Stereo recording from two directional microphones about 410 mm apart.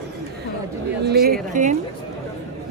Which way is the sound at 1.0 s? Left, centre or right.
Right.